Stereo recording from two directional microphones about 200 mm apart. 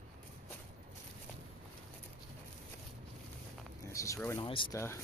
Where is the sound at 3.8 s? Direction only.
15° left (ahead or behind).